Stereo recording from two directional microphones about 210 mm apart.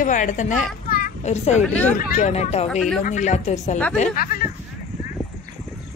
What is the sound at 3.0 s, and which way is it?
Speech, 35° left (ahead or behind).